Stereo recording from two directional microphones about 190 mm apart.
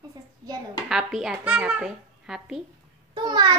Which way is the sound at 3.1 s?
20° right (ahead or behind).